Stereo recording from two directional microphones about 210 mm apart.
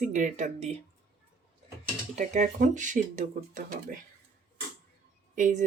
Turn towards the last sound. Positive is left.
turn(degrees=-35)  # may be behind; listen again after turning